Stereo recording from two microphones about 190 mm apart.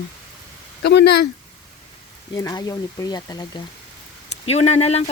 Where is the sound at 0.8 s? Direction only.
65° left (ahead or behind).